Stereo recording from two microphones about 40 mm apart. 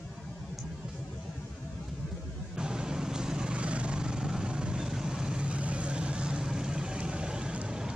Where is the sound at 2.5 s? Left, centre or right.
Centre.